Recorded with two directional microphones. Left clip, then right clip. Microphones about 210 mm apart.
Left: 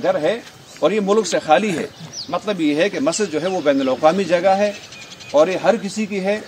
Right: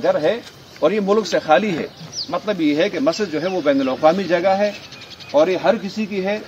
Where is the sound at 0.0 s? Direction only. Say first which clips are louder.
Right 1 dB; centre (ahead or behind).